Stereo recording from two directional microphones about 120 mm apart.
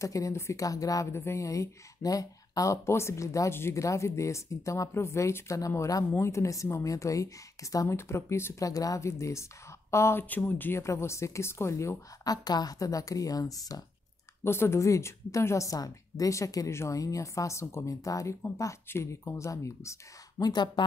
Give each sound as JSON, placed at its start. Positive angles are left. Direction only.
{"t": 0.0, "sound": "a woman's voice", "side_deg": 25}
{"t": 14.4, "sound": "a woman's voice", "side_deg": 20}